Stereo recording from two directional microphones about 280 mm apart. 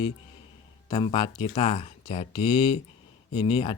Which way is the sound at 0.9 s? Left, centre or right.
Centre.